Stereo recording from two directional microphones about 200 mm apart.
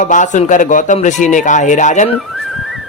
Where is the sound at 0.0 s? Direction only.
40° left (ahead or behind).